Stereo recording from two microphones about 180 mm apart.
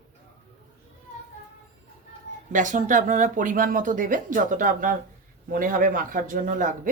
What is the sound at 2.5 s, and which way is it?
Speech, 45° right (ahead or behind).